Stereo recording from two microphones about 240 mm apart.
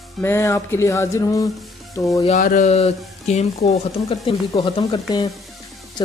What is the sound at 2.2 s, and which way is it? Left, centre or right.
A woman's voice, left.